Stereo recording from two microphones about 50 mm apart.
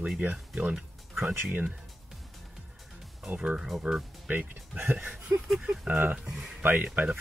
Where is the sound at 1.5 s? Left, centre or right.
Right.